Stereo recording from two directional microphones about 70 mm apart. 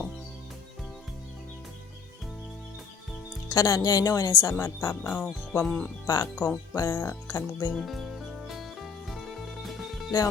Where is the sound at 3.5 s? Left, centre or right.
Left.